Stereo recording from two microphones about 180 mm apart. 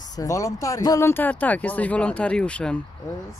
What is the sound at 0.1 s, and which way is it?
Speech, 20° left (ahead or behind).